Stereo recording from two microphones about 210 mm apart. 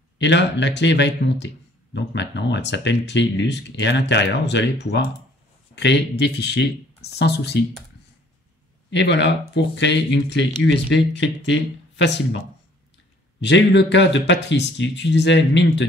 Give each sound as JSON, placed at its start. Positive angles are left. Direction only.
{"t": 0.2, "sound": "speech", "side_deg": 55}
{"t": 8.9, "sound": "speech", "side_deg": 55}
{"t": 13.4, "sound": "speech", "side_deg": 55}